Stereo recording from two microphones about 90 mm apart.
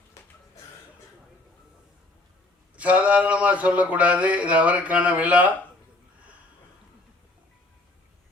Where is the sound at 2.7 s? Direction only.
15° right (ahead or behind).